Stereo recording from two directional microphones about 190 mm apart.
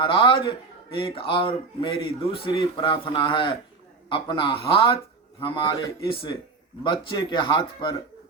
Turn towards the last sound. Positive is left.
turn(degrees=25)  # may be behind; listen again after turning